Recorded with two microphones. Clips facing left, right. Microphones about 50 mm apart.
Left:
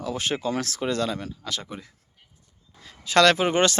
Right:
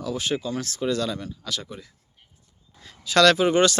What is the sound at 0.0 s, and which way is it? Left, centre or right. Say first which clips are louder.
Speech: even; left.